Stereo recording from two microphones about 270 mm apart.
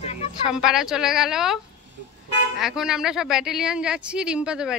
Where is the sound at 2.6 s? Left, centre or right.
Centre.